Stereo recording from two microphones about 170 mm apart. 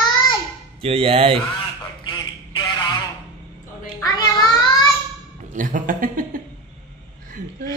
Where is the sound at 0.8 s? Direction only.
35° right (ahead or behind).